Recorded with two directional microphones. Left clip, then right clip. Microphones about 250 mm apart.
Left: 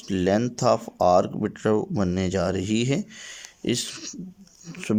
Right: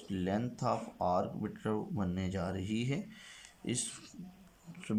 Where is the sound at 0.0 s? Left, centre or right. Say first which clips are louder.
Left 14 dB; left.